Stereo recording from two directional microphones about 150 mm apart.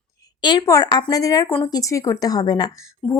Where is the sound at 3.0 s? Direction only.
5° left (ahead or behind).